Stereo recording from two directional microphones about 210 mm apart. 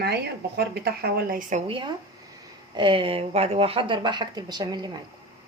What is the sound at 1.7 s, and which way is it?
Speech, 25° right (ahead or behind).